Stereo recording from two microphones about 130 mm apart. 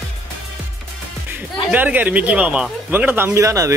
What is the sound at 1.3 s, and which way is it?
Speech, 15° right (ahead or behind).